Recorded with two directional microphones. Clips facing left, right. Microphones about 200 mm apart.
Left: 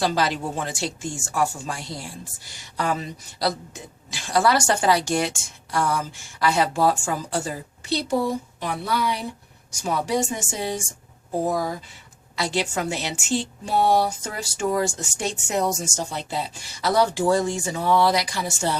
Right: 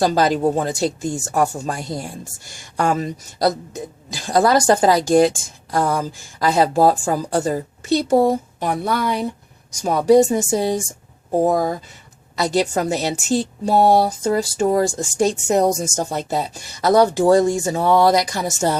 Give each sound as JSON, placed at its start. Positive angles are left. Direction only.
{"t": 0.0, "sound": "a woman's voice", "side_deg": -45}
{"t": 9.8, "sound": "a woman's voice", "side_deg": -40}
{"t": 11.3, "sound": "a woman's voice", "side_deg": -50}